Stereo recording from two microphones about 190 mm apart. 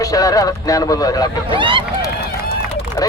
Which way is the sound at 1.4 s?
25° right (ahead or behind).